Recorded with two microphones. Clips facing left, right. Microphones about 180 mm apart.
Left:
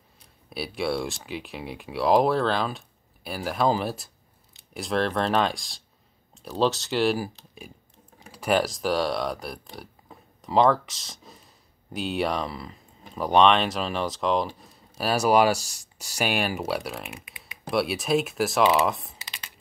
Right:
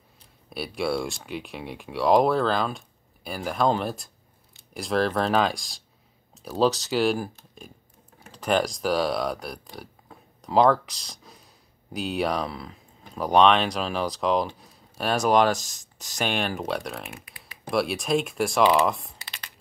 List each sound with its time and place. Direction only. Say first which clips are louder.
0.5 s speech: right 1 dB; centre (ahead or behind)